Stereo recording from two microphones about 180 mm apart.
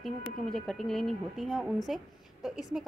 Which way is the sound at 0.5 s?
Centre (ahead or behind).